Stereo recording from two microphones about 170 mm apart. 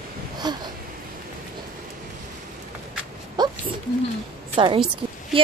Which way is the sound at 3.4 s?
25° right (ahead or behind).